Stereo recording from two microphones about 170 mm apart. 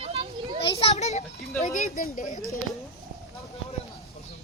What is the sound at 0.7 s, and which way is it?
A child's voice, 40° left (ahead or behind).